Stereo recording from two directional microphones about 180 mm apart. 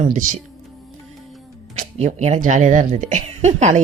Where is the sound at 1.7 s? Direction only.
40° right (ahead or behind).